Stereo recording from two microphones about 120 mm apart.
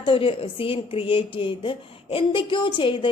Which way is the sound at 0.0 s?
50° left (ahead or behind).